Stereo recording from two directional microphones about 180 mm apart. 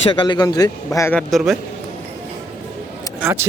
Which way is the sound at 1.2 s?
Centre (ahead or behind).